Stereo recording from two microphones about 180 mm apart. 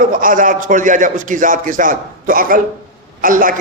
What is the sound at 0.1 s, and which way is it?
A man's voice, 50° right (ahead or behind).